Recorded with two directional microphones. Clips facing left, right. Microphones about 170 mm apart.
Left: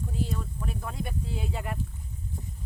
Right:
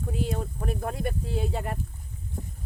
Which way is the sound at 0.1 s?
70° right (ahead or behind).